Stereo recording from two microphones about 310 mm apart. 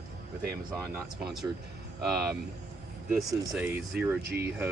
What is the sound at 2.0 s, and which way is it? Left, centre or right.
Speech, centre.